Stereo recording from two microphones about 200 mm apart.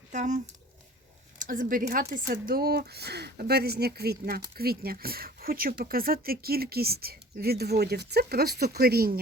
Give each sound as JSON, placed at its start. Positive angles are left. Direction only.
{"t": 0.1, "sound": "speech", "side_deg": -40}